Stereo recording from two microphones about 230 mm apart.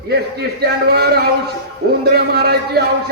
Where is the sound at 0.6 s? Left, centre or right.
Right.